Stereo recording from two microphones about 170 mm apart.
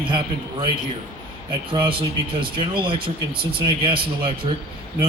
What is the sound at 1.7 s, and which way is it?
Speech, 30° right (ahead or behind).